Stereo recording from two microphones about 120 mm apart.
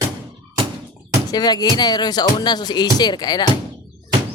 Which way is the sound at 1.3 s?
35° left (ahead or behind).